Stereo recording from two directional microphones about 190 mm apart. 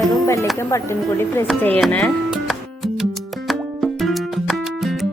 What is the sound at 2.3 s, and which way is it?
Music, centre (ahead or behind).